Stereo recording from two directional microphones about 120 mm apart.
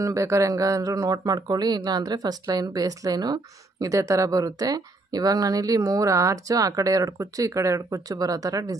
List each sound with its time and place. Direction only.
0.0 s speech: 25° right (ahead or behind)